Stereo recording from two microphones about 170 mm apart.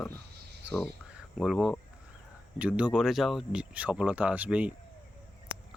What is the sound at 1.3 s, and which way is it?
Speech, centre (ahead or behind).